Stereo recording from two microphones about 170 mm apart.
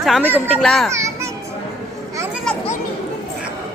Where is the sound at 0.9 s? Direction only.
15° right (ahead or behind).